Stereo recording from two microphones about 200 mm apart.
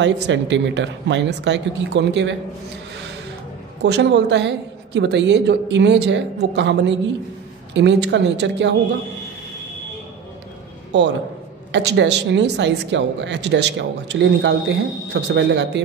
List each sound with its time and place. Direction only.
0.0 s speech: 60° right (ahead or behind)
3.8 s speech: 60° right (ahead or behind)
10.9 s a man's voice: 60° right (ahead or behind)